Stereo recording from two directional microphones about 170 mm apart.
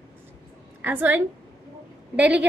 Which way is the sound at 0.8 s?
10° right (ahead or behind).